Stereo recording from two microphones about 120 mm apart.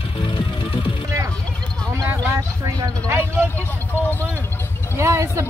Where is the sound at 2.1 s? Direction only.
20° right (ahead or behind).